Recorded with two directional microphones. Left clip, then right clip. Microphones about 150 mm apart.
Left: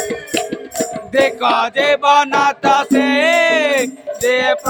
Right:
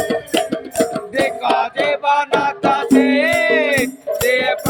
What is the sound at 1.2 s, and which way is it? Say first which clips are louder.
Music: left 1 dB; 55° left (ahead or behind).